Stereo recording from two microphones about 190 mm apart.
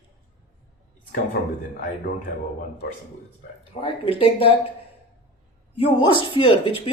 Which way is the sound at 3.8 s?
30° left (ahead or behind).